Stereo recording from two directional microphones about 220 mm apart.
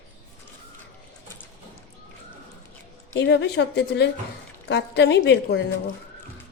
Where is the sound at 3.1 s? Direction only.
55° left (ahead or behind).